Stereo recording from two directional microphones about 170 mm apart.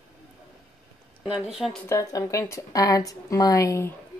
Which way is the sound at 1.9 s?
20° left (ahead or behind).